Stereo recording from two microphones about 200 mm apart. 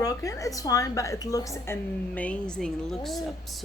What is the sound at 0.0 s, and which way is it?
A woman's voice, 15° left (ahead or behind).